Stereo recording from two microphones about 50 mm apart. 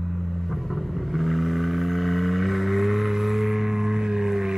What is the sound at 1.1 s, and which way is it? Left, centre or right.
Vehicle, centre.